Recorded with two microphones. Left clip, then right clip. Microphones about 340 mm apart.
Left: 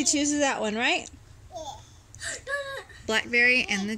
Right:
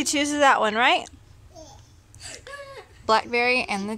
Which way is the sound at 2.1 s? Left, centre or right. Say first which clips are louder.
Left 7 dB; centre.